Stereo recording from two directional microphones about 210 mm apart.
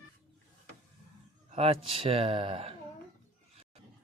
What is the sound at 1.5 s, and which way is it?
Speech, 25° right (ahead or behind).